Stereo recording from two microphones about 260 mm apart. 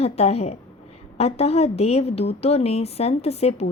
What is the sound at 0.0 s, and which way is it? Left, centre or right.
A woman's voice, left.